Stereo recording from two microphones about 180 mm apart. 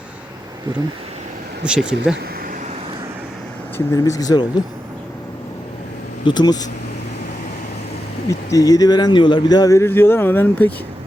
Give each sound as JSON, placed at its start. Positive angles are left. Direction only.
{"t": 1.6, "sound": "speech", "side_deg": -5}
{"t": 3.8, "sound": "speech", "side_deg": 15}
{"t": 6.2, "sound": "speech", "side_deg": 25}
{"t": 8.3, "sound": "speech", "side_deg": 20}